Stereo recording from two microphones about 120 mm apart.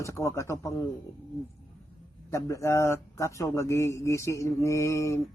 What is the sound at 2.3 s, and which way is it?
Speech, 25° left (ahead or behind).